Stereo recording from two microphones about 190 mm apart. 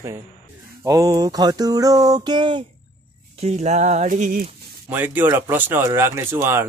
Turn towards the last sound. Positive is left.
turn(degrees=-10)  # may be behind; listen again after turning